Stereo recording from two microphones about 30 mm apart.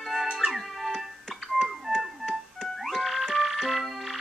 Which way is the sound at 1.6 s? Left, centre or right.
Centre.